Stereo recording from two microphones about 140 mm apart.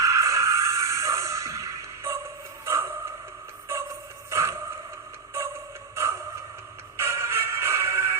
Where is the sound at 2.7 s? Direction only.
20° right (ahead or behind).